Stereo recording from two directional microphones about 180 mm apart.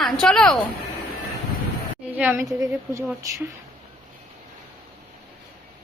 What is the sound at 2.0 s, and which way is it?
A woman's voice, 10° right (ahead or behind).